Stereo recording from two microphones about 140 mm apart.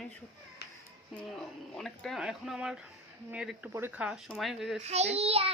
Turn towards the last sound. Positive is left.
turn(degrees=-45)  # may be behind; listen again after turning